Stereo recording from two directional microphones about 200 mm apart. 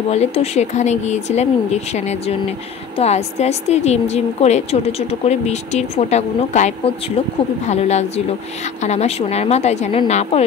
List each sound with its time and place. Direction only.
0.1 s a woman's voice: 30° left (ahead or behind)